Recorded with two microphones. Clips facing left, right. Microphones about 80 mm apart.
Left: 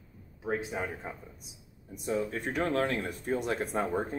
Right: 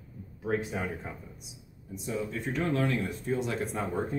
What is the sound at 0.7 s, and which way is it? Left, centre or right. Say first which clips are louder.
Speech: right 1 dB; centre.